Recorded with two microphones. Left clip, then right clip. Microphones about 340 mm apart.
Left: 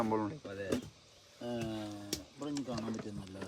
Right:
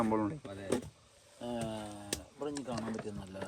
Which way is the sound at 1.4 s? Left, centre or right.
Right.